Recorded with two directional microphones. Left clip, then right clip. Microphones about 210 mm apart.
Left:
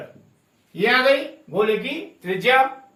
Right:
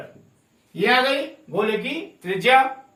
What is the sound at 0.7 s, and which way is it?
Speech, 15° right (ahead or behind).